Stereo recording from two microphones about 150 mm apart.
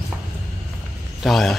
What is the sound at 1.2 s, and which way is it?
Speech, centre (ahead or behind).